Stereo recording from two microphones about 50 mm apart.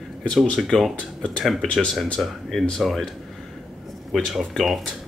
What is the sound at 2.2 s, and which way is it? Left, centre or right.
Speech, centre.